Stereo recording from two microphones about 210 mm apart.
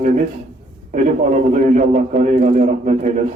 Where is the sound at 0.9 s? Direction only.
35° right (ahead or behind).